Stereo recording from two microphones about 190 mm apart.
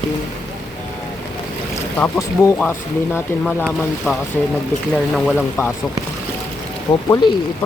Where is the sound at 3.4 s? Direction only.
Centre (ahead or behind).